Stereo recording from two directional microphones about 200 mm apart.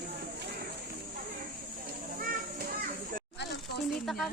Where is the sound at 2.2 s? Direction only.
45° right (ahead or behind).